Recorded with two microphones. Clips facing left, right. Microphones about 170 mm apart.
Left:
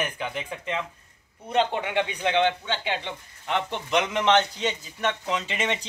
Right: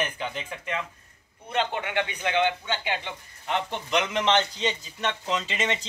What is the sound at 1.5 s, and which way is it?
Speech, 30° left (ahead or behind).